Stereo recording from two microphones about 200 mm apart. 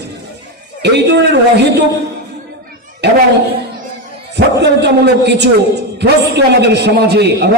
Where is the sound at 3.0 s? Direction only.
55° right (ahead or behind).